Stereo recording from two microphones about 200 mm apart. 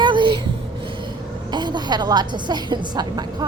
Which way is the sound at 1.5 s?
20° right (ahead or behind).